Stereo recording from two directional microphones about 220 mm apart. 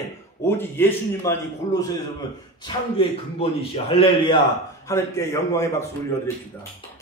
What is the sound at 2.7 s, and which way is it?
A man's voice, 25° left (ahead or behind).